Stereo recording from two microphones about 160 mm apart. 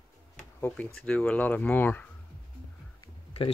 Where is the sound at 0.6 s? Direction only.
10° left (ahead or behind).